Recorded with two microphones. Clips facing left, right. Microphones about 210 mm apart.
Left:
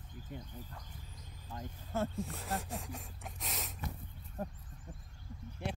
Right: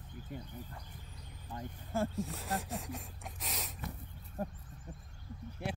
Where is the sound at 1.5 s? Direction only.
5° right (ahead or behind).